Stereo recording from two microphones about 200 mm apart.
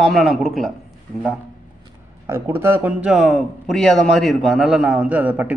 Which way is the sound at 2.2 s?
10° right (ahead or behind).